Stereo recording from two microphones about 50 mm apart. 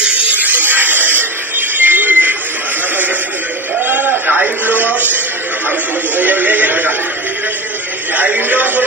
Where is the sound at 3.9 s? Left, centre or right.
Right.